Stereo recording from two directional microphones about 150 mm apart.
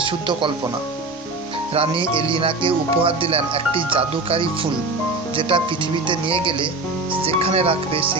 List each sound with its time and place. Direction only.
0.0 s speech: 35° right (ahead or behind)
1.7 s speech: 40° right (ahead or behind)